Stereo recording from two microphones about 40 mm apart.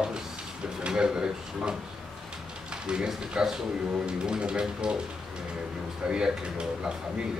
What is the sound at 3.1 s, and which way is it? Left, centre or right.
Speech, centre.